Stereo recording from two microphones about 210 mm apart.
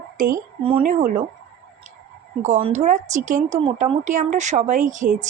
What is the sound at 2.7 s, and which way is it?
Speech, 35° right (ahead or behind).